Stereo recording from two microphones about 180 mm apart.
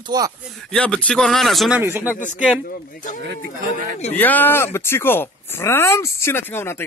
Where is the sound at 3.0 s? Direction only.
45° left (ahead or behind).